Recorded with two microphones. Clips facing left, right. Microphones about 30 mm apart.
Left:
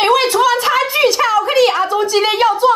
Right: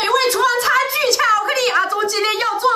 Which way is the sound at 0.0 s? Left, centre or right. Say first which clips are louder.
Left 4 dB; left.